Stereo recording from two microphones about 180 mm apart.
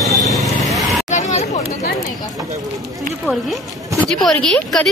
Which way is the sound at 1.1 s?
40° left (ahead or behind).